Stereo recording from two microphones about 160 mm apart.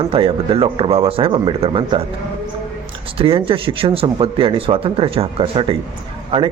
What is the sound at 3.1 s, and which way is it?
Speech, 35° right (ahead or behind).